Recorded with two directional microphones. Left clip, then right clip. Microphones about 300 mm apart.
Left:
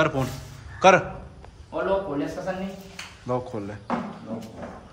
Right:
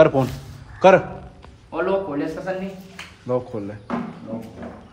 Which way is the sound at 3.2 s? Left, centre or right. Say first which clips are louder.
Right 4 dB; centre.